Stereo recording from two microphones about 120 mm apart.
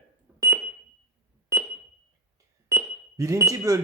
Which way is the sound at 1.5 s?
25° right (ahead or behind).